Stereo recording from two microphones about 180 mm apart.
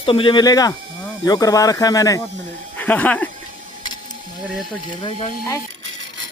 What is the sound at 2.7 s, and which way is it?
Speech, 10° left (ahead or behind).